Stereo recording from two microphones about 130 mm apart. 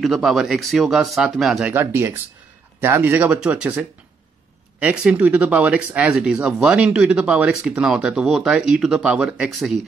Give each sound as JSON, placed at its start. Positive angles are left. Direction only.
{"t": 0.0, "sound": "speech", "side_deg": 0}
{"t": 1.7, "sound": "speech", "side_deg": -15}